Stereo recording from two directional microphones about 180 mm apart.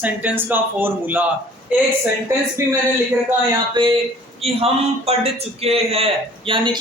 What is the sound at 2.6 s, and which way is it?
Speech, 15° right (ahead or behind).